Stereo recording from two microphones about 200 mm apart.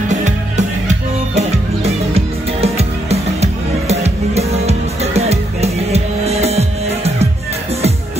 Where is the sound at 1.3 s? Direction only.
30° right (ahead or behind).